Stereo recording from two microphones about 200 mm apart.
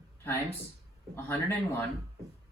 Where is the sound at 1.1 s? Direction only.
10° left (ahead or behind).